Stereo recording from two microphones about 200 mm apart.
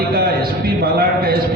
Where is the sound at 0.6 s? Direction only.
50° right (ahead or behind).